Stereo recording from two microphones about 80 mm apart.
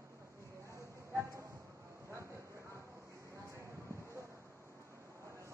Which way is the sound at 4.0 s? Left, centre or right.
Right.